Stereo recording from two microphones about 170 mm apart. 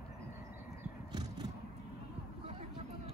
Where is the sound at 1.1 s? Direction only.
25° right (ahead or behind).